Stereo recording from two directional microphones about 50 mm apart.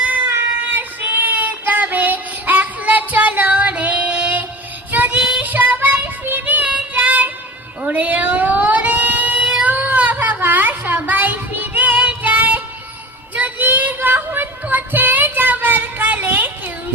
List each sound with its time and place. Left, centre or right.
0.3 s child singing: right
5.4 s music: right
6.4 s child singing: right
7.8 s a sound: right
13.3 s child singing: right